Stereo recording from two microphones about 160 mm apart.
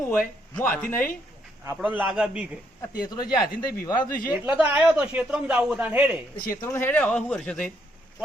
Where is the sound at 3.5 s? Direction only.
70° left (ahead or behind).